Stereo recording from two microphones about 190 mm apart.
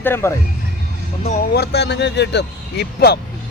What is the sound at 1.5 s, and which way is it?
Speech, 60° left (ahead or behind).